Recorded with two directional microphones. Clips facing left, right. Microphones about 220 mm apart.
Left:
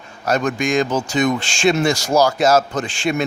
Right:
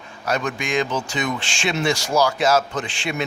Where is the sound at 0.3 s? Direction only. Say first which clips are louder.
Left 5 dB; 45° left (ahead or behind).